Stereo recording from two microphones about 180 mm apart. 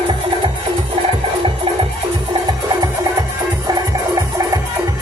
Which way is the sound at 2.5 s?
20° right (ahead or behind).